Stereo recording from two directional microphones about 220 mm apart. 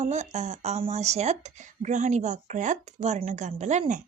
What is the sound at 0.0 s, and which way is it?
Speech, 30° right (ahead or behind).